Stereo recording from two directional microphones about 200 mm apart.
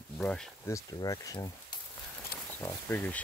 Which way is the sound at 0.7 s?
20° left (ahead or behind).